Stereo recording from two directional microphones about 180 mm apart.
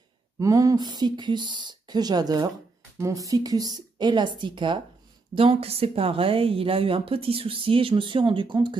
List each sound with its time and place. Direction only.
0.4 s a woman's voice: 20° right (ahead or behind)